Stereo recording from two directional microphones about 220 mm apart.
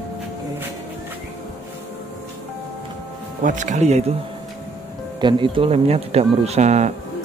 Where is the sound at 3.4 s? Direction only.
35° right (ahead or behind).